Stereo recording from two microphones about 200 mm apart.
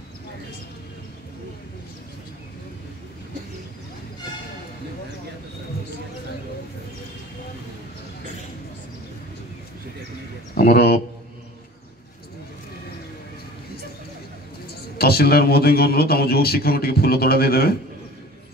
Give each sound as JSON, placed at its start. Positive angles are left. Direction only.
{"t": 10.5, "sound": "a man's voice", "side_deg": 50}
{"t": 15.0, "sound": "a man's voice", "side_deg": 50}